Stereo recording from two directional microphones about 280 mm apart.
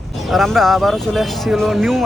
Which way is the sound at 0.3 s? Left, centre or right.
Centre.